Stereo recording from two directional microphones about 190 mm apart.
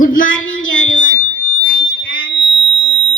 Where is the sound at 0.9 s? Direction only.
45° left (ahead or behind).